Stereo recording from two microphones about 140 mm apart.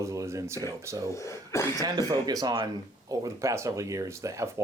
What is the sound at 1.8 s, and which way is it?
Speech, 25° right (ahead or behind).